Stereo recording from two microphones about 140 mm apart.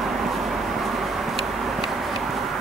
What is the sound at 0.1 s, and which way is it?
Vehicle, centre (ahead or behind).